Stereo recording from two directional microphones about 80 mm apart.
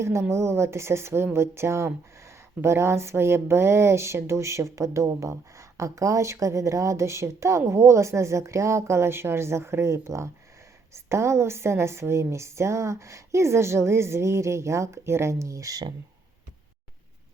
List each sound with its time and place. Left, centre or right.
0.0 s a woman's voice: right